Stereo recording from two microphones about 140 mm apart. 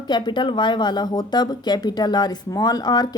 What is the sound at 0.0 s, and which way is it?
A woman's voice, 30° left (ahead or behind).